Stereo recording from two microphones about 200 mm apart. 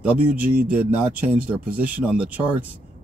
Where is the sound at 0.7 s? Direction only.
5° right (ahead or behind).